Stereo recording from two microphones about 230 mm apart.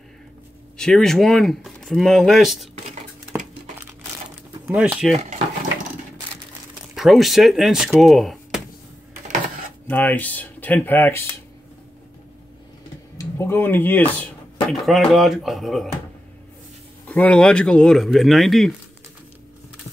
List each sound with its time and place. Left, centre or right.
0.7 s speech: centre
4.6 s speech: centre
5.1 s speech: right
7.0 s speech: centre
9.8 s speech: centre
13.2 s speech: centre
17.1 s speech: centre